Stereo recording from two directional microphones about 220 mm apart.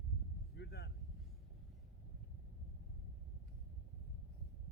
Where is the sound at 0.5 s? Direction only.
50° left (ahead or behind).